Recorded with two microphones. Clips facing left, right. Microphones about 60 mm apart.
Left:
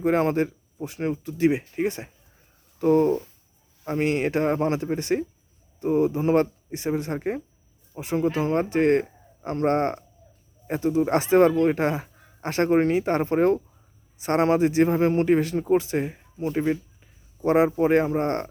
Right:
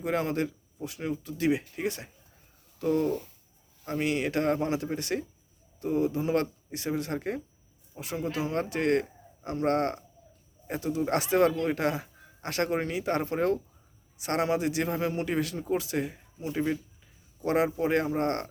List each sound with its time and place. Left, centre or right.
0.0 s speech: left